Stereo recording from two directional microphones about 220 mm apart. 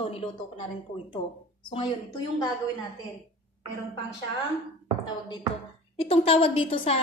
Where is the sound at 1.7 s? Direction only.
25° left (ahead or behind).